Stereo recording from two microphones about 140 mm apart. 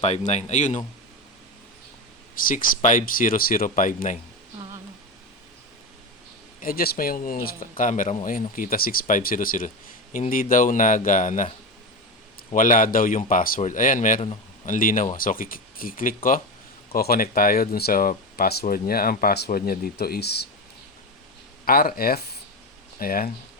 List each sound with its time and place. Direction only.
0.0 s speech: 55° left (ahead or behind)
2.4 s speech: 80° left
6.6 s speech: 90° left; by 11.4 s 65° left (ahead or behind)
12.5 s speech: 70° left (ahead or behind)
13.6 s speech: 65° left (ahead or behind)
16.9 s speech: 90° left
21.6 s speech: 90° left